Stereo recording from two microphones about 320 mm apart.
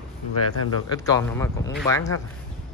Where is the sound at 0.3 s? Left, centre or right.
Left.